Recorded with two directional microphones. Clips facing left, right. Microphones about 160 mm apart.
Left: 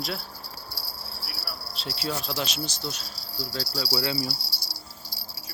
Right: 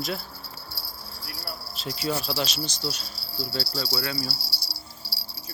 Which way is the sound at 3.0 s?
40° left (ahead or behind).